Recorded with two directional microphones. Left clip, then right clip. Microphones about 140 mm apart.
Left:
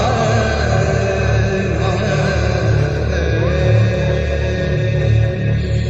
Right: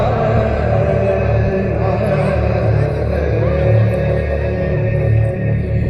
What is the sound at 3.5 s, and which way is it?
Music, 15° left (ahead or behind).